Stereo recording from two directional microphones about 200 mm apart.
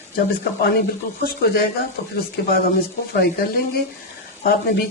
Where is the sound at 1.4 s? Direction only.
50° left (ahead or behind).